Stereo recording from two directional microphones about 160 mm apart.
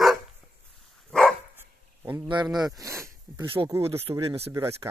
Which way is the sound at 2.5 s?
25° right (ahead or behind).